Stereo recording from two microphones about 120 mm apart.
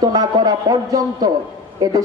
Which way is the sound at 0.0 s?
35° right (ahead or behind).